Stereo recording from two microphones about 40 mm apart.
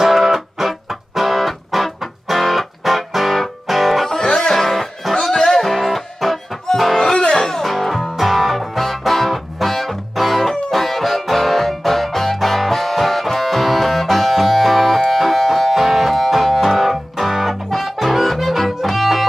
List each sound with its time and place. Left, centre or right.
0.1 s music: centre
4.1 s music: centre
5.7 s music: centre
7.0 s music: centre
7.6 s music: centre